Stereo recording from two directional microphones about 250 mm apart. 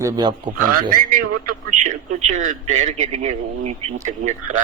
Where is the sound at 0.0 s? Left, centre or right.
Centre.